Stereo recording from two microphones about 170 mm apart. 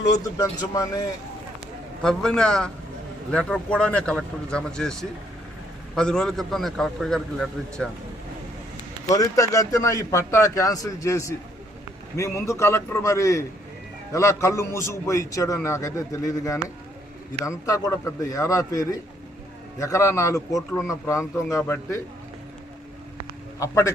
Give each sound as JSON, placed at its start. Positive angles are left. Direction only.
{"t": 0.2, "sound": "speech", "side_deg": 20}
{"t": 2.0, "sound": "a man's voice", "side_deg": 5}
{"t": 9.0, "sound": "a man's voice", "side_deg": 20}
{"t": 23.6, "sound": "speech", "side_deg": 20}